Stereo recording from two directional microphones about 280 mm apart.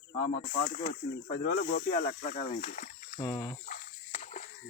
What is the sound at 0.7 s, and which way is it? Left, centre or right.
Speech, left.